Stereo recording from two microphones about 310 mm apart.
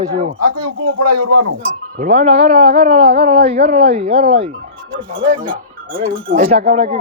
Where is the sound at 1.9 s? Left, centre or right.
Right.